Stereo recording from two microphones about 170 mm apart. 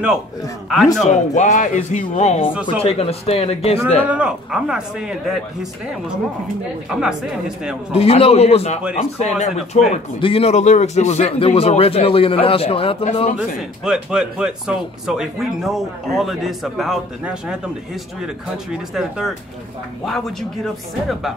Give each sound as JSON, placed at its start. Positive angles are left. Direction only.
{"t": 1.0, "sound": "speech", "side_deg": 45}
{"t": 4.1, "sound": "a man's voice", "side_deg": -5}
{"t": 7.9, "sound": "speech", "side_deg": 35}
{"t": 13.6, "sound": "a man's voice", "side_deg": -5}